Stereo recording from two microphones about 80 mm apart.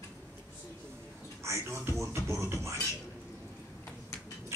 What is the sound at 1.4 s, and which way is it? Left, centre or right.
Speech, right.